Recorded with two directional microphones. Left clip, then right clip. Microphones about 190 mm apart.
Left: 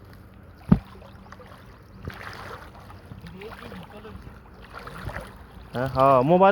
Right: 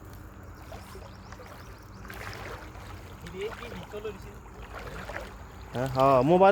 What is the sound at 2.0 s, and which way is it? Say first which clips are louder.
Boat: left 2 dB; 50° left (ahead or behind).